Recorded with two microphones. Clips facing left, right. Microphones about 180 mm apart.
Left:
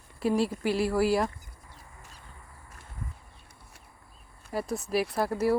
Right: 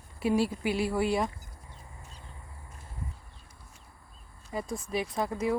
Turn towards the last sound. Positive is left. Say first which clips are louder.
# left 3 dB
turn(degrees=5)  # may be behind; listen again after turning